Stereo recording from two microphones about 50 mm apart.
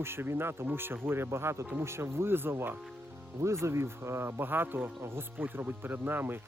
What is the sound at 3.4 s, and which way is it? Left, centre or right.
Speech, right.